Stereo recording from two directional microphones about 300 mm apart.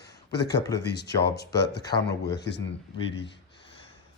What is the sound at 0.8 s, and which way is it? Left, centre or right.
Speech, left.